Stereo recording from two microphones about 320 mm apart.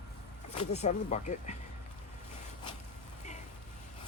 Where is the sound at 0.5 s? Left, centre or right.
Left.